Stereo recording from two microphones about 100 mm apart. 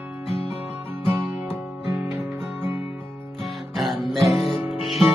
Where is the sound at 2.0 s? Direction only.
20° right (ahead or behind).